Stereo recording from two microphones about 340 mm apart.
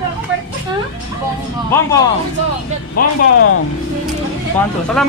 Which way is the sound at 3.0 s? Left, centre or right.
Left.